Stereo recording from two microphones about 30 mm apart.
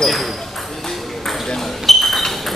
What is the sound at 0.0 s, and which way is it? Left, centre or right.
Speech, centre.